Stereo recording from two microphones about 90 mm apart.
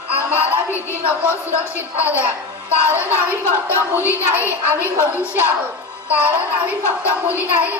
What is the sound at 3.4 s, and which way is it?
Speech, 30° left (ahead or behind).